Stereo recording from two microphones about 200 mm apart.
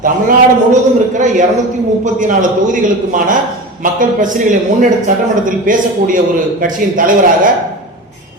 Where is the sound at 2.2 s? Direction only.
40° right (ahead or behind).